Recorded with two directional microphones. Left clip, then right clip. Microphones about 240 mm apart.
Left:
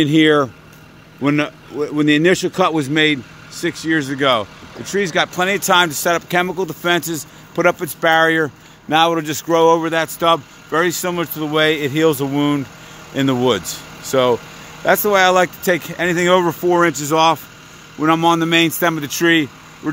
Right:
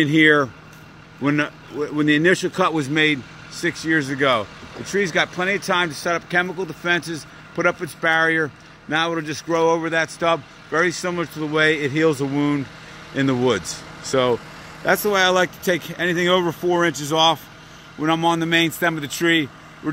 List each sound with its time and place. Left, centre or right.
0.0 s speech: centre